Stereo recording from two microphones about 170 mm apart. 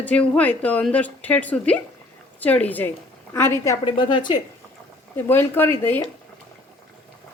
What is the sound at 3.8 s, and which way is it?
Speech, 30° left (ahead or behind).